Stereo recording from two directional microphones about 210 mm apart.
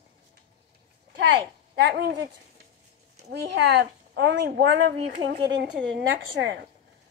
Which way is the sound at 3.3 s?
55° right (ahead or behind).